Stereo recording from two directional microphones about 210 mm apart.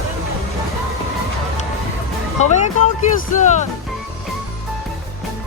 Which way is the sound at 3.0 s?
35° left (ahead or behind).